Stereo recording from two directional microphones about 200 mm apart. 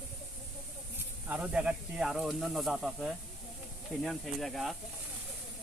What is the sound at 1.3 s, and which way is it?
Speech, 5° right (ahead or behind).